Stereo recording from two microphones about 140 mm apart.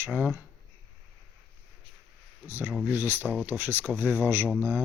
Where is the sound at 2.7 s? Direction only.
10° right (ahead or behind).